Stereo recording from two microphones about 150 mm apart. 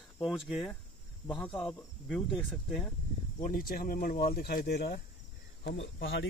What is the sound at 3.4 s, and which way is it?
Speech, 75° left (ahead or behind).